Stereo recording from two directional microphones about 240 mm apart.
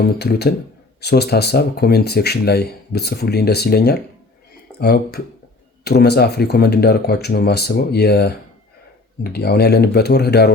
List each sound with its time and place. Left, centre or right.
0.0 s speech: left